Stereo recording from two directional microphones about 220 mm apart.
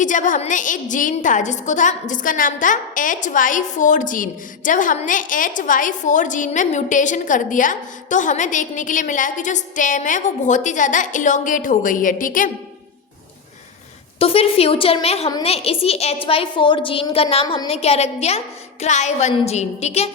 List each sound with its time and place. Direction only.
0.0 s a woman's voice: 35° left (ahead or behind)
14.2 s a woman's voice: 25° left (ahead or behind)